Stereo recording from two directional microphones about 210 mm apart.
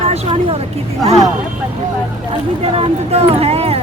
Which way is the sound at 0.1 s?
30° right (ahead or behind).